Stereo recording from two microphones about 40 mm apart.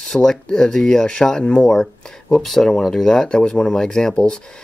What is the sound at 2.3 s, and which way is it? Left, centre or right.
Speech, centre.